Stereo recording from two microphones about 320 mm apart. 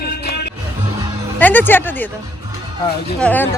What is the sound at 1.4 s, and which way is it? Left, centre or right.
Speech, centre.